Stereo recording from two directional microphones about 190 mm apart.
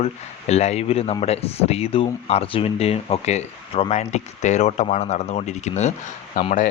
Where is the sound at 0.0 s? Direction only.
35° left (ahead or behind).